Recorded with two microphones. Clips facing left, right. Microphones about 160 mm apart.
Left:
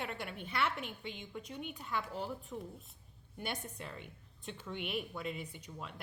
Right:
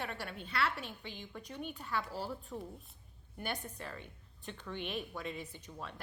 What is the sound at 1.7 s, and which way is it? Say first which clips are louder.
Speech: right 1 dB; 15° left (ahead or behind).